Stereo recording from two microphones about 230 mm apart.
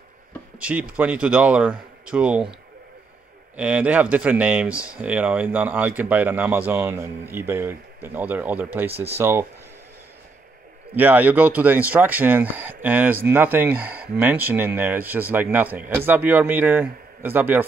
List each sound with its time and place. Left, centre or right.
0.6 s speech: centre
3.5 s speech: centre
8.9 s speech: right
9.2 s speech: centre
11.0 s speech: centre